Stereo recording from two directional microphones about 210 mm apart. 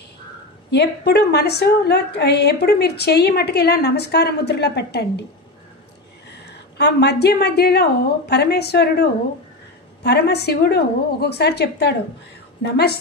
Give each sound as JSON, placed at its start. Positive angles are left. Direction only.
{"t": 0.7, "sound": "a woman's voice", "side_deg": 50}
{"t": 6.3, "sound": "a woman's voice", "side_deg": 50}